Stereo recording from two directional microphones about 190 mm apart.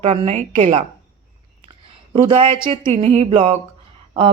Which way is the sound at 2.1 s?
25° right (ahead or behind).